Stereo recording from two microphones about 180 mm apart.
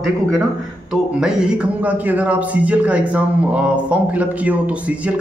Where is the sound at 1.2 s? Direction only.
5° right (ahead or behind).